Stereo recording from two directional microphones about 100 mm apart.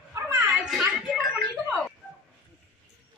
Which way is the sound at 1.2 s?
Centre (ahead or behind).